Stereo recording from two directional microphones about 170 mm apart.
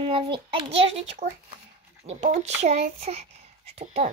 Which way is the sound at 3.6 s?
40° right (ahead or behind).